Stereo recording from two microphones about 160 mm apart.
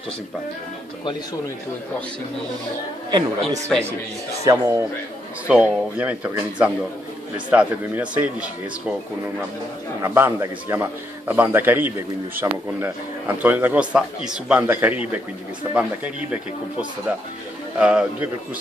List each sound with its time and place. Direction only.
3.7 s a man's voice: centre (ahead or behind)
4.5 s a man's voice: 20° right (ahead or behind)
5.5 s a man's voice: 5° right (ahead or behind)
10.0 s a man's voice: 15° right (ahead or behind)
17.7 s a man's voice: 5° right (ahead or behind)